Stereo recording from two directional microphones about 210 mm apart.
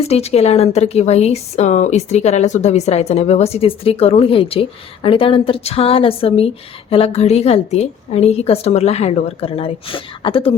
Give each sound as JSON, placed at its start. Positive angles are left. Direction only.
{"t": 0.1, "sound": "a woman's voice", "side_deg": 30}